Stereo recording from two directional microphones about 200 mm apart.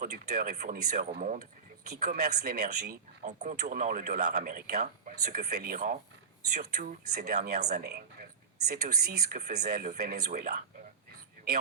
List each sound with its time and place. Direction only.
0.0 s speech: 45° right (ahead or behind)
2.0 s speech: 50° right (ahead or behind)
3.2 s speech: 35° right (ahead or behind)